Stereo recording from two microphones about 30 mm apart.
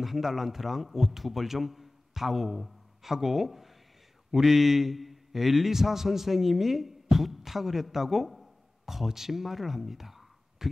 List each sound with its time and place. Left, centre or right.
0.0 s a man's voice: centre